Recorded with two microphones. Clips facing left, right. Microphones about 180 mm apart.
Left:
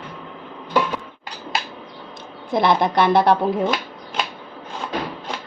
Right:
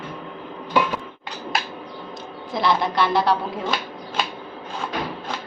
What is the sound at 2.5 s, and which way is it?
Speech, 55° left (ahead or behind).